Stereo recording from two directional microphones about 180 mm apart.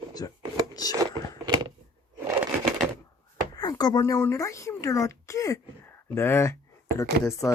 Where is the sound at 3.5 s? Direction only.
20° left (ahead or behind).